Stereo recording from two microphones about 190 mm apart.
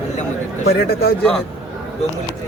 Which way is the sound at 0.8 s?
55° left (ahead or behind).